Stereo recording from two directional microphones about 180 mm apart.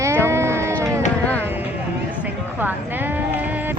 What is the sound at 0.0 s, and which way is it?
Sheep, 15° right (ahead or behind).